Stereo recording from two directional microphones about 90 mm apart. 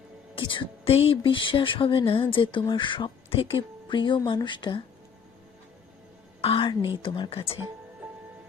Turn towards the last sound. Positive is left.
turn(degrees=90)